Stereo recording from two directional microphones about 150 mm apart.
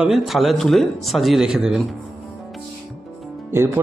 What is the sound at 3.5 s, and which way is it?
Speech, 15° right (ahead or behind).